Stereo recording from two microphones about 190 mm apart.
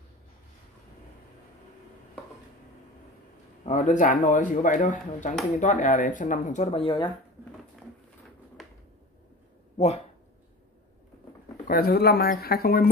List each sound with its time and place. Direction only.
3.6 s speech: 40° left (ahead or behind)
9.8 s speech: 35° left (ahead or behind)
11.6 s speech: 55° left (ahead or behind)